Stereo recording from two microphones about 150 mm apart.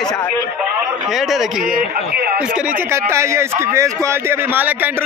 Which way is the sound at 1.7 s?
90° right.